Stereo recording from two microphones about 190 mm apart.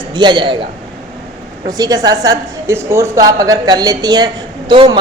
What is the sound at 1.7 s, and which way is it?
Speech, 20° right (ahead or behind).